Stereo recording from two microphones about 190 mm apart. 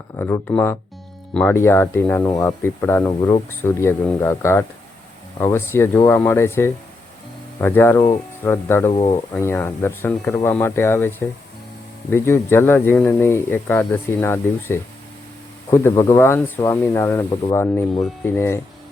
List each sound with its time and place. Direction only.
0.2 s speech: 10° left (ahead or behind)
8.9 s speech: 25° left (ahead or behind)
9.1 s speech: 15° left (ahead or behind)
12.1 s speech: 10° left (ahead or behind)